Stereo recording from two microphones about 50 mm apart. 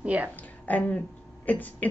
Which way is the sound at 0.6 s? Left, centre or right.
Left.